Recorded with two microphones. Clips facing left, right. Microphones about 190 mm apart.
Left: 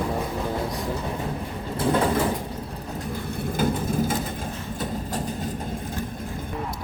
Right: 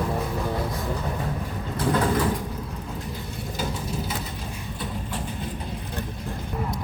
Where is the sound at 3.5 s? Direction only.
50° left (ahead or behind).